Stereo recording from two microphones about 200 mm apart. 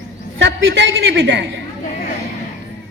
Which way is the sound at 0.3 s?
65° right (ahead or behind).